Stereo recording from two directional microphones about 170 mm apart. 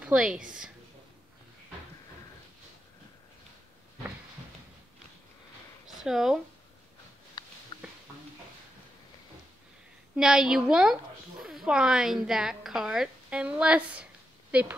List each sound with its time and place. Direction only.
0.0 s a woman's voice: 5° right (ahead or behind)
5.9 s speech: centre (ahead or behind)
7.4 s a sound: 25° left (ahead or behind)
10.1 s a woman's voice: 5° right (ahead or behind)